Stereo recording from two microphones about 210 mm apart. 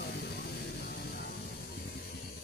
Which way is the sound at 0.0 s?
50° left (ahead or behind).